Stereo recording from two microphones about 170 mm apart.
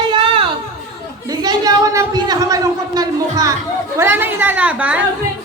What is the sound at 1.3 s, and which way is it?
A man's voice, 20° right (ahead or behind).